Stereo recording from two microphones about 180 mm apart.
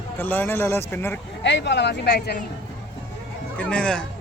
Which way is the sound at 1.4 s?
75° left (ahead or behind).